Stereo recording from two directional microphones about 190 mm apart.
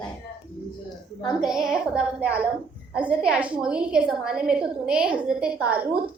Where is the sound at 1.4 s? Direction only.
5° right (ahead or behind).